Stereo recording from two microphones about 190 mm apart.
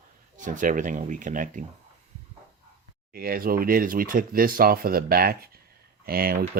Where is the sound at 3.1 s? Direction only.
50° right (ahead or behind).